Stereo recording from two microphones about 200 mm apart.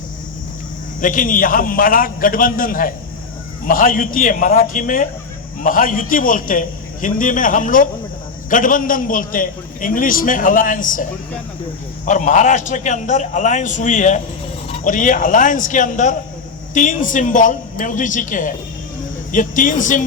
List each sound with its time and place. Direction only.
1.0 s a man's voice: 40° left (ahead or behind)
12.0 s a man's voice: 40° left (ahead or behind)